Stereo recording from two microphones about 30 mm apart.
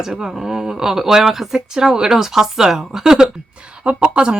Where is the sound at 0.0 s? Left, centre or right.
Centre.